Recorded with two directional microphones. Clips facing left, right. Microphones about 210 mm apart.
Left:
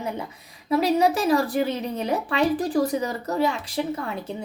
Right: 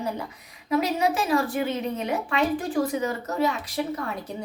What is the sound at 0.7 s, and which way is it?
A woman's voice, 35° left (ahead or behind).